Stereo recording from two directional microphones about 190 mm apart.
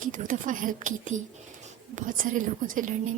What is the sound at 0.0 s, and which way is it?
A woman's voice, 45° right (ahead or behind).